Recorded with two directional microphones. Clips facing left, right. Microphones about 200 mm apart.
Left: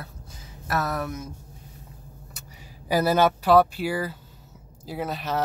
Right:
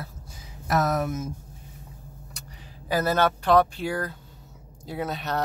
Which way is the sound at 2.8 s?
10° left (ahead or behind).